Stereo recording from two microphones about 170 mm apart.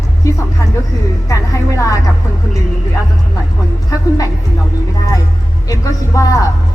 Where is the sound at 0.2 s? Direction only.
20° left (ahead or behind).